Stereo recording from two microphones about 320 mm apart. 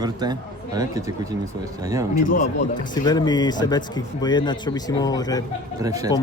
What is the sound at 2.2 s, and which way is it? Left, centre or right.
Speech, left.